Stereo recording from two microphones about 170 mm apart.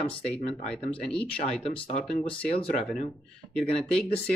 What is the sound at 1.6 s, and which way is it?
Speech, 35° left (ahead or behind).